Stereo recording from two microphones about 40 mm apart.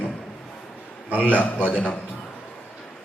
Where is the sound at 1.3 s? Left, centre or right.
Left.